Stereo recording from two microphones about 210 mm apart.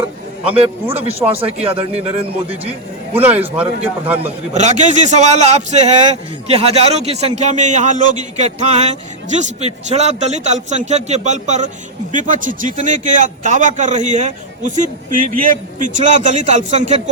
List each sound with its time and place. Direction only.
0.5 s a man's voice: 25° right (ahead or behind)
3.1 s a man's voice: 5° right (ahead or behind)
4.5 s a man's voice: 35° right (ahead or behind)